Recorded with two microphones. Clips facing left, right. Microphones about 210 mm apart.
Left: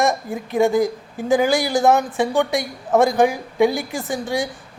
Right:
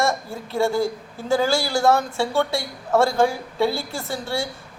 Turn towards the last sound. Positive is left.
turn(degrees=15)  # may be behind; listen again after turning